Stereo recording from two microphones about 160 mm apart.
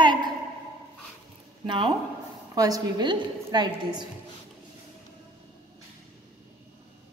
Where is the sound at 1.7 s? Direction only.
30° right (ahead or behind).